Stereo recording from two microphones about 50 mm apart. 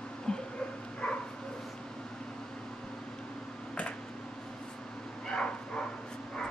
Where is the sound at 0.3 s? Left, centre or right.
Centre.